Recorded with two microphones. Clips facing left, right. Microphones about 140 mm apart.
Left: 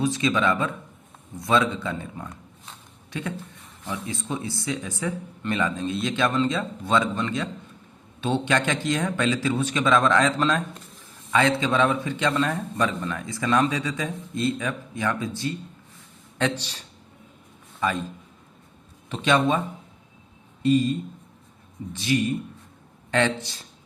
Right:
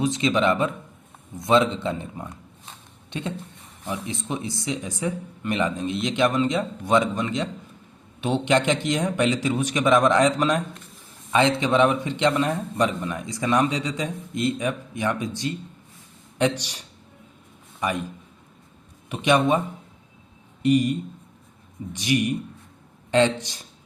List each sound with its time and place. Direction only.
0.0 s a man's voice: 20° right (ahead or behind)
19.0 s speech: 15° right (ahead or behind)
23.4 s speech: 15° right (ahead or behind)